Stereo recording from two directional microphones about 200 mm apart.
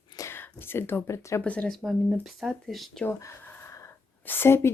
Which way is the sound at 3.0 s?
10° left (ahead or behind).